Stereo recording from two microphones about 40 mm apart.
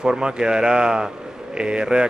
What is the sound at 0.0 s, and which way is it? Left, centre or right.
Speech, right.